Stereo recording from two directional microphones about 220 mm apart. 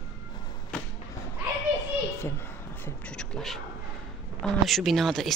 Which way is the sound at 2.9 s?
5° left (ahead or behind).